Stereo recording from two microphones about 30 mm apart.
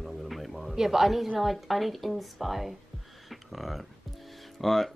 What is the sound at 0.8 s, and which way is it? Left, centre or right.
Speech, centre.